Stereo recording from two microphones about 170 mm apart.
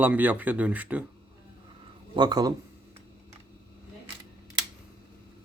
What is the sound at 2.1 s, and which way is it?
Speech, 25° right (ahead or behind).